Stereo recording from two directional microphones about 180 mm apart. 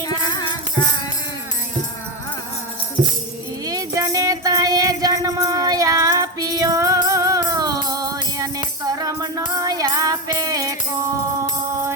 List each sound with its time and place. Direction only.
0.0 s music: 20° left (ahead or behind)
3.7 s music: 20° right (ahead or behind)